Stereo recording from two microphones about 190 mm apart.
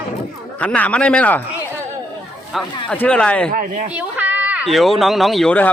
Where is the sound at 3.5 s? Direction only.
40° right (ahead or behind).